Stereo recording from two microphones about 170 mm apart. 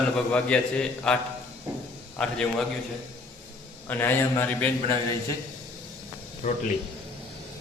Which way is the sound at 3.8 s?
10° left (ahead or behind).